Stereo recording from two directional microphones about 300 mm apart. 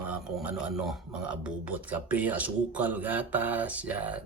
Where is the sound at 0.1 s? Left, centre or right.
Centre.